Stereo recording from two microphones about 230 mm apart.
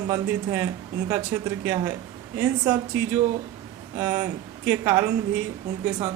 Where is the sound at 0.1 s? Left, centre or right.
Centre.